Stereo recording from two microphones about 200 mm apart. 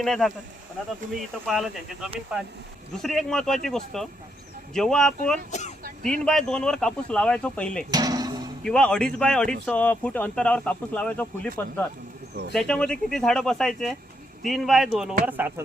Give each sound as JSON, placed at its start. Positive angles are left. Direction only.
{"t": 0.0, "sound": "speech", "side_deg": 0}
{"t": 1.5, "sound": "speech", "side_deg": 0}
{"t": 5.5, "sound": "speech", "side_deg": 35}
{"t": 6.0, "sound": "speech", "side_deg": 5}
{"t": 7.9, "sound": "music", "side_deg": -20}
{"t": 8.6, "sound": "speech", "side_deg": 5}